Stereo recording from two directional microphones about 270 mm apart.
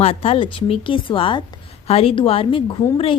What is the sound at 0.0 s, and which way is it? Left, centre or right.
A woman's voice, left.